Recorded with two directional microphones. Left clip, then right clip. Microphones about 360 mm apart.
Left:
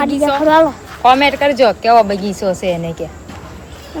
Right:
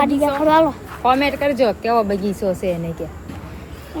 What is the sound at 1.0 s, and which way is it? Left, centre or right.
Speech, left.